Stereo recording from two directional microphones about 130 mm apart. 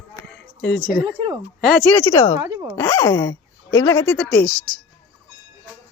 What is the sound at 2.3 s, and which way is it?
Speech, 25° right (ahead or behind).